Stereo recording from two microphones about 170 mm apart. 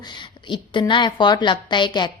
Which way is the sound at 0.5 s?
30° left (ahead or behind).